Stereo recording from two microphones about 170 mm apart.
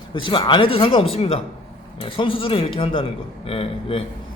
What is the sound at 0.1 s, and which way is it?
Speech, 30° left (ahead or behind).